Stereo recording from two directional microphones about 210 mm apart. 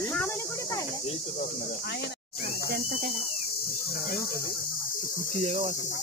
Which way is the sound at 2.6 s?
45° right (ahead or behind).